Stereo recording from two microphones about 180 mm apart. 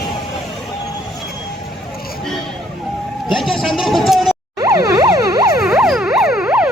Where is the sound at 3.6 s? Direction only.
Centre (ahead or behind).